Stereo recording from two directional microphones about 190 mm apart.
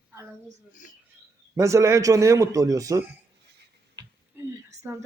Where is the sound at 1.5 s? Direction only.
15° right (ahead or behind).